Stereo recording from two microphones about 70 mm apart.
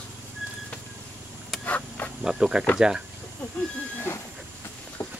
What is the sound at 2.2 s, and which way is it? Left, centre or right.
Speech, centre.